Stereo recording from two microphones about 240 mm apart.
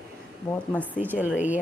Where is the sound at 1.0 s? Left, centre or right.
Centre.